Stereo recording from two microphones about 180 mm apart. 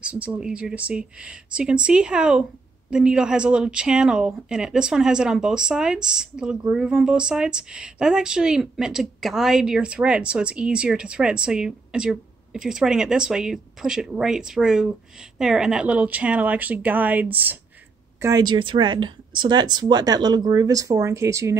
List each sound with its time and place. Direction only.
0.0 s a woman's voice: 5° right (ahead or behind)
18.2 s speech: 20° right (ahead or behind)